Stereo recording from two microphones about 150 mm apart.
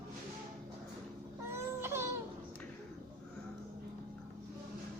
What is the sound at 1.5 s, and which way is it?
Baby cry, 15° right (ahead or behind).